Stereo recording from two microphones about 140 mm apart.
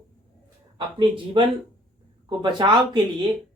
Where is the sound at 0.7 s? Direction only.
35° right (ahead or behind).